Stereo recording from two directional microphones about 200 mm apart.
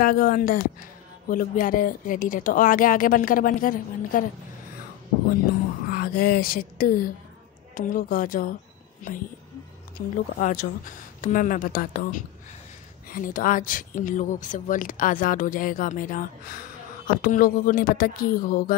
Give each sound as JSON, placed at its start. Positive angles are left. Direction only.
{"t": 0.0, "sound": "speech", "side_deg": 45}
{"t": 5.9, "sound": "speech", "side_deg": 45}
{"t": 9.9, "sound": "speech", "side_deg": 45}